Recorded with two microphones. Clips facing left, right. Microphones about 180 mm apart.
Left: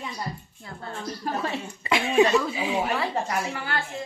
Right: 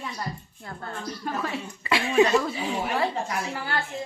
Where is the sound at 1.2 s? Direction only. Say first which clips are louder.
Left 1 dB; 30° left (ahead or behind).